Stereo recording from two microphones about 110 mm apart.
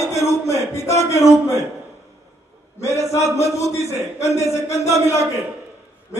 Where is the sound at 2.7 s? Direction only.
25° left (ahead or behind).